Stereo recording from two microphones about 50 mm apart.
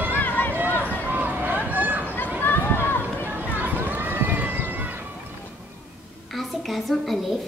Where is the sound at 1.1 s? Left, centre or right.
Right.